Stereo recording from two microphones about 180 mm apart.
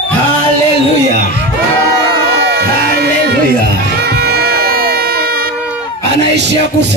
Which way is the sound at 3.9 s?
60° right (ahead or behind).